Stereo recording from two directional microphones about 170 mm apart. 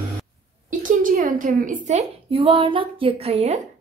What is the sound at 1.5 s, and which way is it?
Speech, 50° right (ahead or behind).